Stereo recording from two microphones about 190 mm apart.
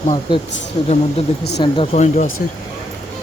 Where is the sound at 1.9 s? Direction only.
40° left (ahead or behind).